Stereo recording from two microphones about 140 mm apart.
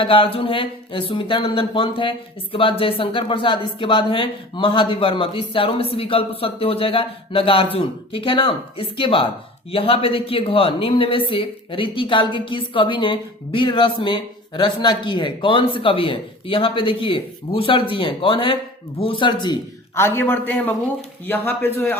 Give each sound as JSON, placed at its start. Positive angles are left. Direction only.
{"t": 0.0, "sound": "speech", "side_deg": 40}
{"t": 20.0, "sound": "a man's voice", "side_deg": 15}